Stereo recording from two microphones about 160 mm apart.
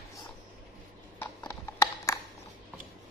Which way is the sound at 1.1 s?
20° left (ahead or behind).